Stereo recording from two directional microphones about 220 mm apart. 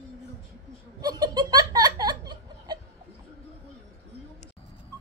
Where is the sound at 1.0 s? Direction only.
20° right (ahead or behind).